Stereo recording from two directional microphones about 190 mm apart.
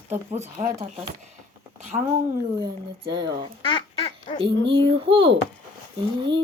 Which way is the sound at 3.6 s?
30° left (ahead or behind).